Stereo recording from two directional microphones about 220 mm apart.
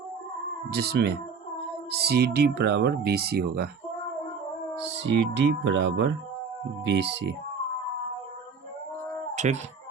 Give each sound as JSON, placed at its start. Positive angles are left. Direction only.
{"t": 0.7, "sound": "speech", "side_deg": -45}
{"t": 4.9, "sound": "speech", "side_deg": -55}
{"t": 9.3, "sound": "cat", "side_deg": -30}